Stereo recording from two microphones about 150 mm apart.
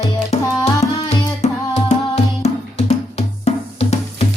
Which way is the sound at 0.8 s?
45° left (ahead or behind).